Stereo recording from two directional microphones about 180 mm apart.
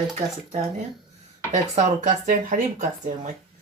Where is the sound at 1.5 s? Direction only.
40° right (ahead or behind).